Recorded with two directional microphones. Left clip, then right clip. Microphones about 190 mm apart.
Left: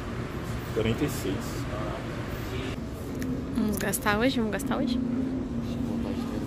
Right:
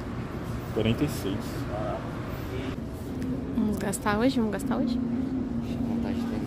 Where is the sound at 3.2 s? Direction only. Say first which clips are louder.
Right 1 dB; 10° right (ahead or behind).